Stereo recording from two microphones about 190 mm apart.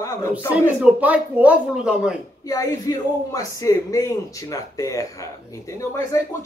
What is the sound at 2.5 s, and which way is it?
Speech, 20° left (ahead or behind).